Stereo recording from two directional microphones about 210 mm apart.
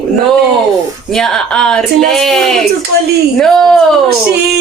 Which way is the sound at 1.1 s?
5° left (ahead or behind).